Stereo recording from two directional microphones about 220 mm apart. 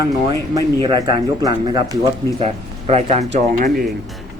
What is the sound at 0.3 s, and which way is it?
Speech, 15° right (ahead or behind).